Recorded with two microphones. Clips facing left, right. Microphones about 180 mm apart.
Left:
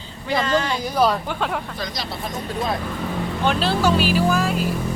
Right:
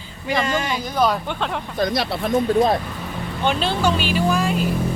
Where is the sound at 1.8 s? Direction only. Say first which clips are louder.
Right 8 dB; 60° right (ahead or behind).